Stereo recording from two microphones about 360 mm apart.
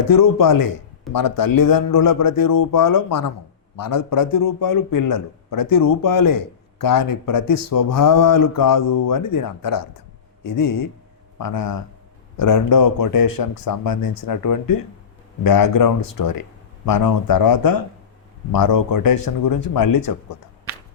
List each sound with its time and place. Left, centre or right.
0.0 s a man's voice: left